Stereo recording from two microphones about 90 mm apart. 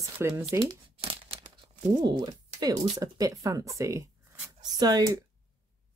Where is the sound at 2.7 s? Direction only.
40° right (ahead or behind).